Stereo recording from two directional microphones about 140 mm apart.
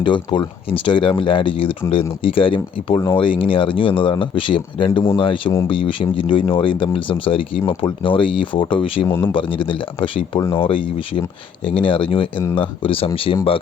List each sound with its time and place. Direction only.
0.0 s speech: 35° left (ahead or behind)
9.0 s speech: 15° left (ahead or behind)
9.3 s speech: 35° left (ahead or behind)